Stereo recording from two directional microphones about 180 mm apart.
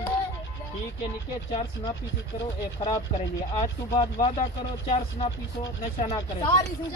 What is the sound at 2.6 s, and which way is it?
Speech, 25° left (ahead or behind).